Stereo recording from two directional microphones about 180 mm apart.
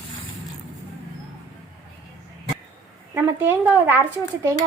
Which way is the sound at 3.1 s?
10° right (ahead or behind).